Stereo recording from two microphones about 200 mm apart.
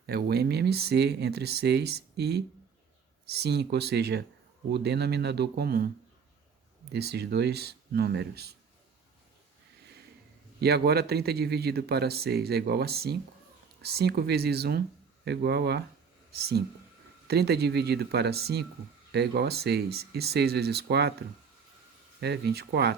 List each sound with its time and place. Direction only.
0.0 s speech: 50° right (ahead or behind)
6.9 s speech: 55° right (ahead or behind)
10.6 s speech: 55° right (ahead or behind)